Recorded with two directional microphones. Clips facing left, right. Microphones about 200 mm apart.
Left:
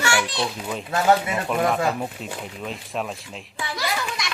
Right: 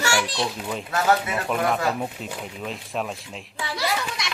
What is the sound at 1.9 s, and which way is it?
Speech, centre (ahead or behind).